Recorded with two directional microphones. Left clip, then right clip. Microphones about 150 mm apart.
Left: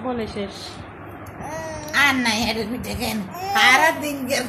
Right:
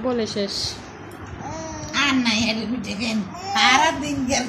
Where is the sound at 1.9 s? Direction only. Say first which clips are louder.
Left 2 dB; 55° left (ahead or behind).